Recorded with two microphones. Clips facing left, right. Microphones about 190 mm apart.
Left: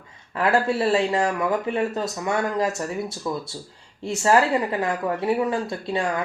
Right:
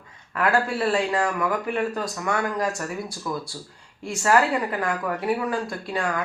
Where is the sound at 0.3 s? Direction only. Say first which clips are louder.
Left 2 dB; 25° left (ahead or behind).